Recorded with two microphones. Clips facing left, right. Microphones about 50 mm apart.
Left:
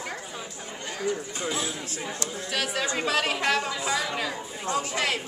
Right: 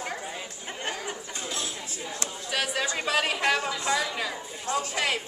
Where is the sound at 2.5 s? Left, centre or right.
Centre.